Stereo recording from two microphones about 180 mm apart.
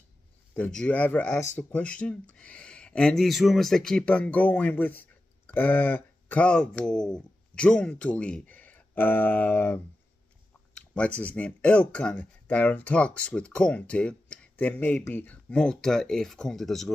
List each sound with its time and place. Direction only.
0.6 s speech: 5° left (ahead or behind)